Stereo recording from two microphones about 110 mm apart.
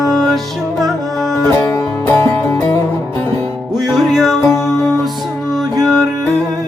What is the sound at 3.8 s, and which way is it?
Music, centre (ahead or behind).